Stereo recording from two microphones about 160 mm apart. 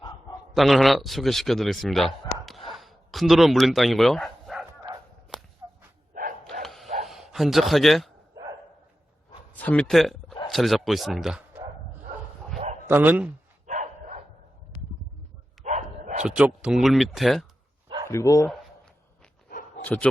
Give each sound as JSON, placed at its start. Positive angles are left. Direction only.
{"t": 0.5, "sound": "a man's voice", "side_deg": 0}
{"t": 2.6, "sound": "bow-wow", "side_deg": 0}
{"t": 6.1, "sound": "dog", "side_deg": -55}
{"t": 6.5, "sound": "dog", "side_deg": 0}
{"t": 6.8, "sound": "bow-wow", "side_deg": -45}
{"t": 7.1, "sound": "a man's voice", "side_deg": 0}
{"t": 9.5, "sound": "a man's voice", "side_deg": 10}
{"t": 12.9, "sound": "a man's voice", "side_deg": -10}
{"t": 13.7, "sound": "dog", "side_deg": -45}
{"t": 15.6, "sound": "dog", "side_deg": -50}
{"t": 16.2, "sound": "a man's voice", "side_deg": -5}
{"t": 18.1, "sound": "speech", "side_deg": 20}
{"t": 19.5, "sound": "dog", "side_deg": 60}
{"t": 19.8, "sound": "speech", "side_deg": 10}